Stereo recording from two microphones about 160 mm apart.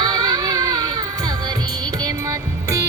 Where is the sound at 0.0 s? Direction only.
25° right (ahead or behind).